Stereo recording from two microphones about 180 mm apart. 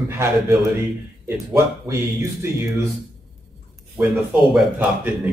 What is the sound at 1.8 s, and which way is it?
Speech, 15° right (ahead or behind).